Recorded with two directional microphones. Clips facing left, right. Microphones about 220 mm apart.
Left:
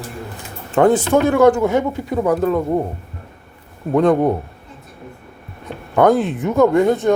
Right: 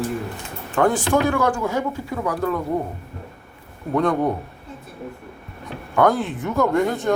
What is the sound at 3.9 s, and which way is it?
Speech, 20° left (ahead or behind).